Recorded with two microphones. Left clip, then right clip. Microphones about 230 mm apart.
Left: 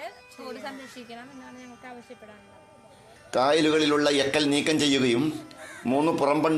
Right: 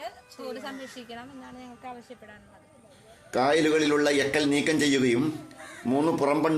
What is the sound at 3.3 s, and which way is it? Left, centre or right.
A man's voice, centre.